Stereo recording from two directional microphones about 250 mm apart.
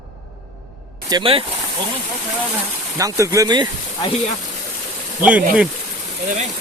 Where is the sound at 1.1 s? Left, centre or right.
Centre.